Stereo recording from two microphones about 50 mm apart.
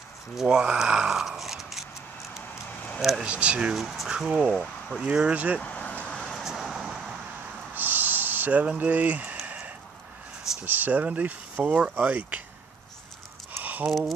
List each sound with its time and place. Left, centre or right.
0.4 s speech: centre
3.0 s speech: centre
3.3 s speech: right
3.7 s speech: centre
5.3 s speech: right
5.6 s vehicle: left
6.0 s vehicle: centre
6.4 s vehicle: centre
7.7 s a sound: right
10.6 s speech: right
13.8 s speech: centre